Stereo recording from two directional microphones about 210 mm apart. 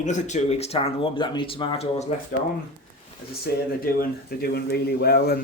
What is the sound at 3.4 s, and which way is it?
Speech, 45° left (ahead or behind).